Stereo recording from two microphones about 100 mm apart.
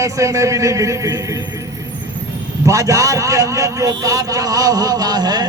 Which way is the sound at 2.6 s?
35° right (ahead or behind).